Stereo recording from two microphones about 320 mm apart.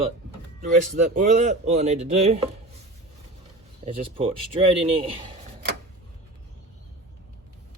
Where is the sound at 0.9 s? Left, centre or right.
Right.